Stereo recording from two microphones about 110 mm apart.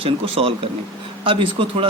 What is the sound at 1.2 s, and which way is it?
Speech, 50° right (ahead or behind).